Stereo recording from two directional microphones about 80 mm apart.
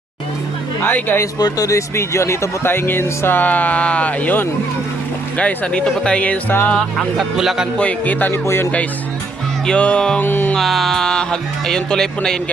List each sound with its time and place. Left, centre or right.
0.8 s speech: left
1.4 s speech: left
7.2 s speech: centre
7.8 s speech: centre
9.6 s speech: centre
10.2 s speech: left
10.5 s speech: centre